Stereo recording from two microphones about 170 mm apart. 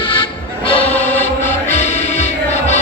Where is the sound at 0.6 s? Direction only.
30° left (ahead or behind).